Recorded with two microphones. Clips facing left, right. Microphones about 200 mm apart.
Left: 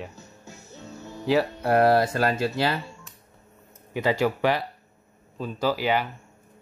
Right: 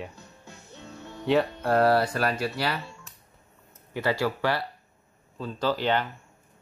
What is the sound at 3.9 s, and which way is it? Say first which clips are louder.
Speech: left 3 dB; 15° left (ahead or behind).